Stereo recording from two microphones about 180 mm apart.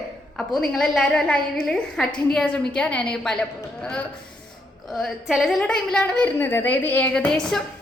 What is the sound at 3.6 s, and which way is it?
Speech, 15° left (ahead or behind).